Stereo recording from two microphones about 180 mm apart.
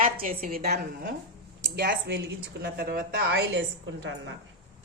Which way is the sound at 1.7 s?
70° right (ahead or behind).